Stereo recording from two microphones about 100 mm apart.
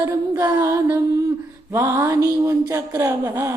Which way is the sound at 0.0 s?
35° right (ahead or behind).